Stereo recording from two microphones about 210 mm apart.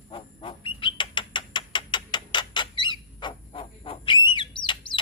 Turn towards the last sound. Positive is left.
turn(degrees=20)  # may be behind; listen again after turning